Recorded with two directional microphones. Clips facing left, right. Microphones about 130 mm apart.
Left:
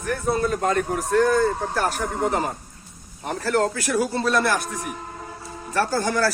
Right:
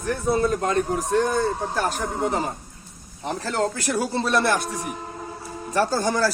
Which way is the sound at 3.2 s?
20° right (ahead or behind).